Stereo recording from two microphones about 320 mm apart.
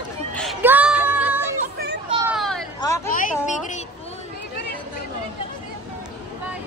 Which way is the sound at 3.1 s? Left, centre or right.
Left.